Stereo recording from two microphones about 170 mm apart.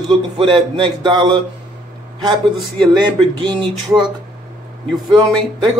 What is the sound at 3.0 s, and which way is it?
Speech, 30° right (ahead or behind).